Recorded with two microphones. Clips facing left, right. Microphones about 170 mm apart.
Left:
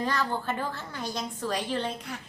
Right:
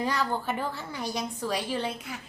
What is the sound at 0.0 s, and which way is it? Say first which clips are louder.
A woman's voice: right 1 dB; 10° right (ahead or behind).